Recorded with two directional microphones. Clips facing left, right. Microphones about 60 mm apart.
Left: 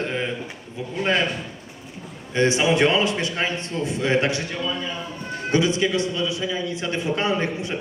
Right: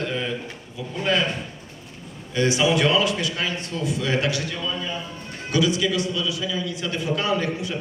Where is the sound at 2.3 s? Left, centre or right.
Left.